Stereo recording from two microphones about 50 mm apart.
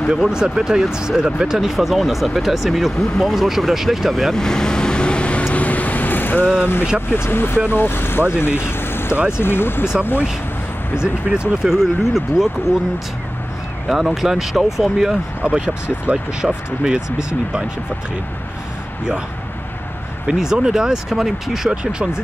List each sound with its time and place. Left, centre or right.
0.1 s speech: centre
4.3 s vehicle: centre; by 6.4 s left
6.6 s speech: left
11.0 s speech: centre
13.8 s speech: centre
15.4 s speech: right
20.2 s speech: centre